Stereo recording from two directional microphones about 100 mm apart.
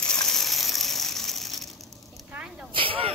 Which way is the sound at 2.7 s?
65° right (ahead or behind).